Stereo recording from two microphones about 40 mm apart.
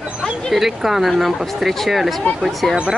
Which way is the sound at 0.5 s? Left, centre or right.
Centre.